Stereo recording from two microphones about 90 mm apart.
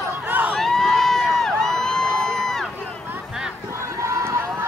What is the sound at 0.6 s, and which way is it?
Crowd, 5° left (ahead or behind).